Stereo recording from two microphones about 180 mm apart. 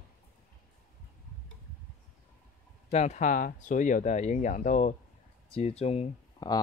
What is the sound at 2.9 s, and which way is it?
Speech, 40° left (ahead or behind).